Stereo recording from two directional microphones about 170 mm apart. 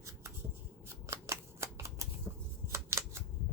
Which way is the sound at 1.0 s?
15° right (ahead or behind).